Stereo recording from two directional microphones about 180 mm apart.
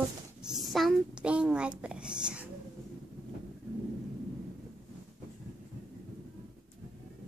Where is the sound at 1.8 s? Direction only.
5° right (ahead or behind).